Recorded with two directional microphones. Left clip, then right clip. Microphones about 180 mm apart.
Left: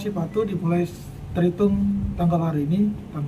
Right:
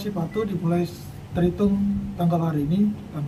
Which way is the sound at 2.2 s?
5° left (ahead or behind).